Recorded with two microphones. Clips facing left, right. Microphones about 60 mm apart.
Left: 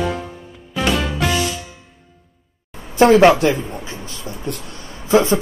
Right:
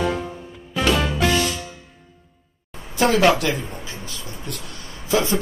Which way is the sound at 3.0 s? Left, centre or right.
Left.